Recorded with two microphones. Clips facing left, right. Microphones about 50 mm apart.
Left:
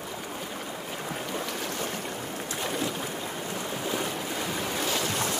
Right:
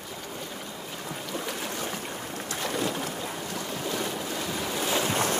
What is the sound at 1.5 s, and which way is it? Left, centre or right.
Boat, centre.